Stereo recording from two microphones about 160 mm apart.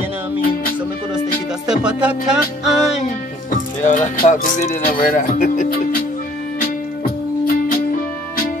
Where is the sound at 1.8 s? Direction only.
5° right (ahead or behind).